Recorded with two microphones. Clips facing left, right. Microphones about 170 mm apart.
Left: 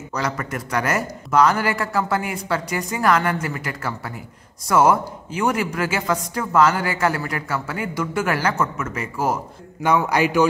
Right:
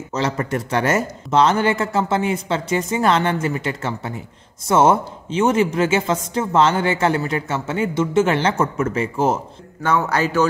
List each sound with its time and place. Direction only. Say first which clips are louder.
0.1 s speech: right 4 dB; 30° right (ahead or behind)
9.8 s speech: left 1 dB; 15° left (ahead or behind)